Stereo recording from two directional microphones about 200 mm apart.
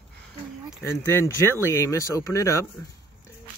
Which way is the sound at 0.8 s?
15° left (ahead or behind).